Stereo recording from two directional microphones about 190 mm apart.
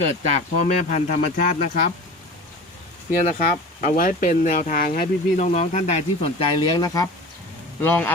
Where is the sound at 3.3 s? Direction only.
45° left (ahead or behind).